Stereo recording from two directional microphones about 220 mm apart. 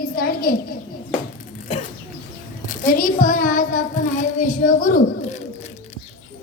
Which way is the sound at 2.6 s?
35° left (ahead or behind).